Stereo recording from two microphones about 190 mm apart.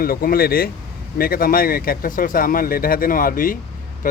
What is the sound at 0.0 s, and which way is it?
Speech, 50° left (ahead or behind).